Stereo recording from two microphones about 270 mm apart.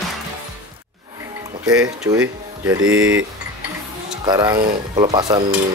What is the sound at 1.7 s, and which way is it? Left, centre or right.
Speech, centre.